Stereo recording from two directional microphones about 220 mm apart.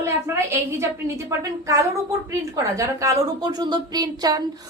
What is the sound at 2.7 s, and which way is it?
Speech, 15° right (ahead or behind).